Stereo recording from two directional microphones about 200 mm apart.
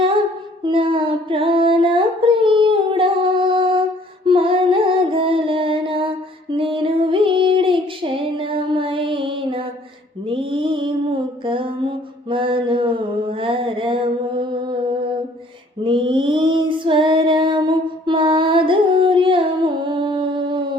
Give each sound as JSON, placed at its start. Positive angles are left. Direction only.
{"t": 0.6, "sound": "a sound", "side_deg": -25}
{"t": 4.3, "sound": "music", "side_deg": -25}
{"t": 10.2, "sound": "mantra", "side_deg": -25}
{"t": 15.8, "sound": "female singing", "side_deg": -25}